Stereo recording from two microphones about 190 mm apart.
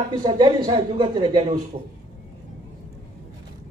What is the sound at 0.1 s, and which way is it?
Speech, 25° right (ahead or behind).